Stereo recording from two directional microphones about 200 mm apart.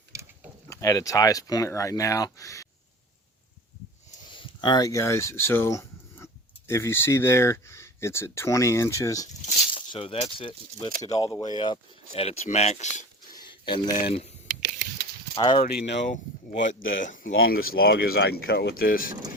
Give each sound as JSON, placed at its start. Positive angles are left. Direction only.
{"t": 0.1, "sound": "a sound", "side_deg": -15}
{"t": 0.7, "sound": "speech", "side_deg": 15}
{"t": 4.3, "sound": "speech", "side_deg": 25}
{"t": 9.9, "sound": "speech", "side_deg": 30}
{"t": 13.3, "sound": "speech", "side_deg": 20}
{"t": 15.4, "sound": "speech", "side_deg": 25}
{"t": 15.7, "sound": "speech", "side_deg": 55}
{"t": 16.0, "sound": "speech", "side_deg": 40}